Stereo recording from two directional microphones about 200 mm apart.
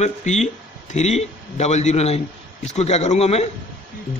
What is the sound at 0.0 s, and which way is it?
A man's voice, 35° left (ahead or behind).